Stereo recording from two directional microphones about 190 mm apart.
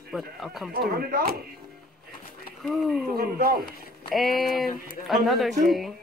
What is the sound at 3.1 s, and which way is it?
Speech, 50° right (ahead or behind).